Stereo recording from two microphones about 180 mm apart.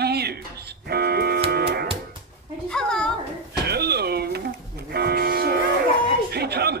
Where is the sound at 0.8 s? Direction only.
60° right (ahead or behind).